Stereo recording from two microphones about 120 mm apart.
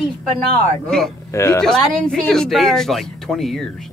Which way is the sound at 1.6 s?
5° left (ahead or behind).